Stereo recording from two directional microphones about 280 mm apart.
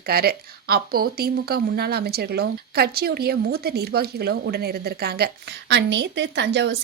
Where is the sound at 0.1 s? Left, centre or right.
Right.